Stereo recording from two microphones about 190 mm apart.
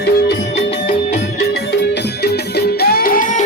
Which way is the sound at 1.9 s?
60° left (ahead or behind).